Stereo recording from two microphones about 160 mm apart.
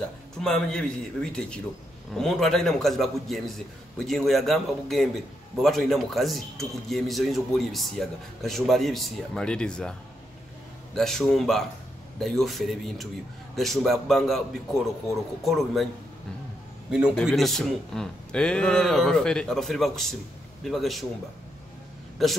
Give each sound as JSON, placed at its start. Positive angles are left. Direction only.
{"t": 0.4, "sound": "a man's voice", "side_deg": 5}
{"t": 11.0, "sound": "a man's voice", "side_deg": 0}
{"t": 16.9, "sound": "a man's voice", "side_deg": -5}
{"t": 22.2, "sound": "a man's voice", "side_deg": 0}